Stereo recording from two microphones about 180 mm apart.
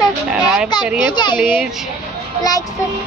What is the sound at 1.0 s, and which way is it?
Speech, 25° left (ahead or behind).